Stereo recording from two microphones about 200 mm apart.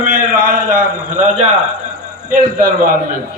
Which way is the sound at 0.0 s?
40° right (ahead or behind).